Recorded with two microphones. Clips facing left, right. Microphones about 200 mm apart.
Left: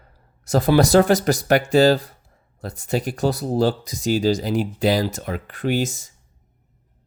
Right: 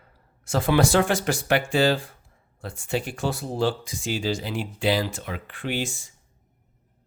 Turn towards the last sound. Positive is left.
turn(degrees=40)  # may be behind; listen again after turning